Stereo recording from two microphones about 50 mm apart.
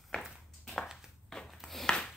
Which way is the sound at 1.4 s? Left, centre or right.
Centre.